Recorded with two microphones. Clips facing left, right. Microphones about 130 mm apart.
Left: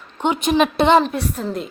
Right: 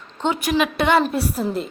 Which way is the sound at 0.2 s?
20° left (ahead or behind).